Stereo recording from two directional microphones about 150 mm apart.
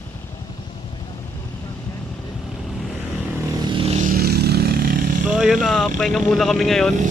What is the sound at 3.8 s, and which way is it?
Vehicle, 45° right (ahead or behind).